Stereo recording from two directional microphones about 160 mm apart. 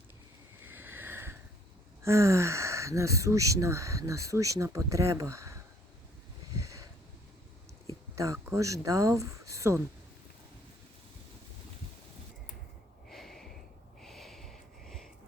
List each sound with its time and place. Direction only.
0.9 s sniff: 15° right (ahead or behind)
2.0 s speech: 15° right (ahead or behind)
8.1 s speech: 20° right (ahead or behind)
13.1 s a sound: centre (ahead or behind)
14.0 s sniff: centre (ahead or behind)